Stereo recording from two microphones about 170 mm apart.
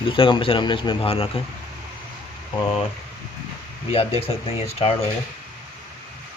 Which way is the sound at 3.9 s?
35° left (ahead or behind).